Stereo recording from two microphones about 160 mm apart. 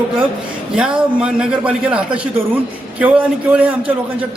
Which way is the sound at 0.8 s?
5° right (ahead or behind).